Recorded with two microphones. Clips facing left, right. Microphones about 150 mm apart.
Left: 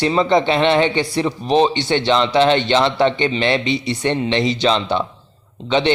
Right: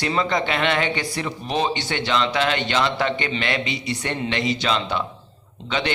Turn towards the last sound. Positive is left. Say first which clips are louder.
# left 8 dB
turn(degrees=25)  # may be behind; listen again after turning